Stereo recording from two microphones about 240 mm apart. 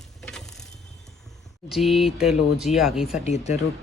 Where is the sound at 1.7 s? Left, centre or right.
Centre.